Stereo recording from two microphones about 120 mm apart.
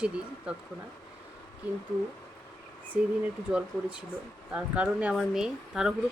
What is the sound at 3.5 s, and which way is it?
Speech, 10° right (ahead or behind).